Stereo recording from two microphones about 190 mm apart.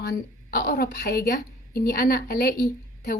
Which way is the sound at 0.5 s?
55° left (ahead or behind).